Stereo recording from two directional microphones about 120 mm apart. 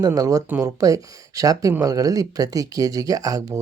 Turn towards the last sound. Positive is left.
turn(degrees=-30)  # may be behind; listen again after turning